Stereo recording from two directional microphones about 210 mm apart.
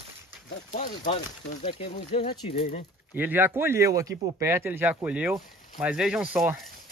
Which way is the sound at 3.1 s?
10° right (ahead or behind).